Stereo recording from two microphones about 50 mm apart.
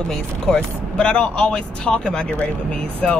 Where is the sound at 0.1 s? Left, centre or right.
Centre.